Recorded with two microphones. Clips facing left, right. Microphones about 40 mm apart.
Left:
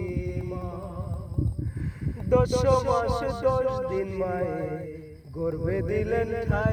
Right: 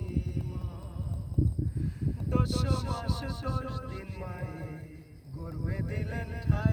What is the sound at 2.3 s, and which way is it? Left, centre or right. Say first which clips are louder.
Speech: left 11 dB; left.